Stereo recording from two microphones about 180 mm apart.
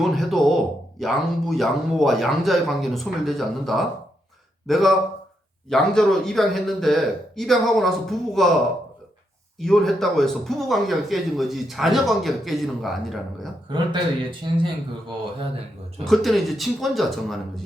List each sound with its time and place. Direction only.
0.0 s speech: centre (ahead or behind)
9.6 s speech: centre (ahead or behind)
13.7 s speech: 25° right (ahead or behind)
16.0 s speech: centre (ahead or behind)